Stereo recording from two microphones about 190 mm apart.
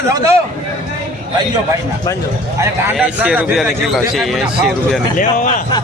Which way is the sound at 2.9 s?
5° right (ahead or behind).